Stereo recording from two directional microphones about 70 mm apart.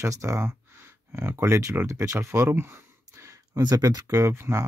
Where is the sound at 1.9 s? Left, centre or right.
Right.